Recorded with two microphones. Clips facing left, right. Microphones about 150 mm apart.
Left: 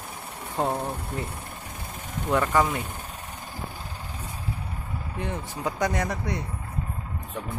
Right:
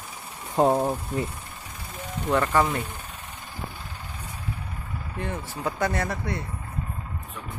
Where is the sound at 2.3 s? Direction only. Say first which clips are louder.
Even; 10° left (ahead or behind).